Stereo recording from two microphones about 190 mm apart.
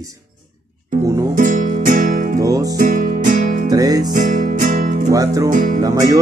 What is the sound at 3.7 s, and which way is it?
Music, 20° right (ahead or behind).